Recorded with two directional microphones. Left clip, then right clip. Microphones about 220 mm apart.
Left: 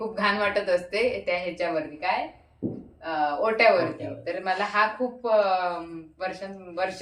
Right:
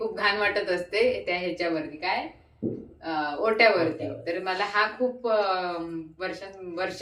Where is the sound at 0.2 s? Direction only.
10° left (ahead or behind).